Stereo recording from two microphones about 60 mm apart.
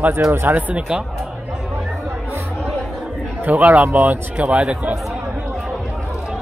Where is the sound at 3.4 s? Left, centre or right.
Right.